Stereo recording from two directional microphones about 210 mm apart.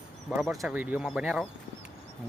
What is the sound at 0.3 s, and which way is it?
Speech, 5° right (ahead or behind).